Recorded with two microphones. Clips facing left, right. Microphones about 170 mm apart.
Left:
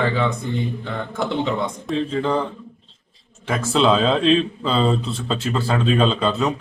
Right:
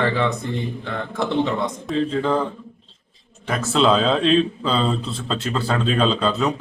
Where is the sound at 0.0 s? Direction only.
Centre (ahead or behind).